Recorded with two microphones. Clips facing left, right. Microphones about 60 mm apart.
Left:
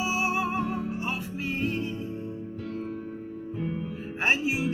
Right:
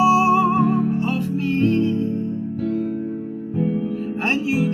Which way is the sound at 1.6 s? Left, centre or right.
Centre.